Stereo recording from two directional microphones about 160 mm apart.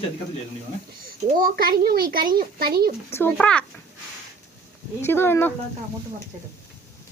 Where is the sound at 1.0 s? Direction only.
65° right (ahead or behind).